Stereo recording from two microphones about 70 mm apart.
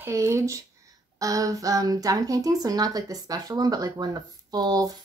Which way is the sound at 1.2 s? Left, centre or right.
Right.